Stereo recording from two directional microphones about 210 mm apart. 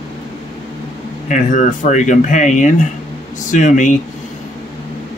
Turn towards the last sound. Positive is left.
turn(degrees=35)  # may be behind; listen again after turning